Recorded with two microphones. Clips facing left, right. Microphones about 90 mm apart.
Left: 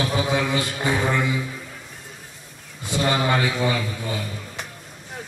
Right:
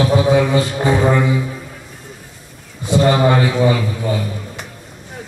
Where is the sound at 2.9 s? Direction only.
15° right (ahead or behind).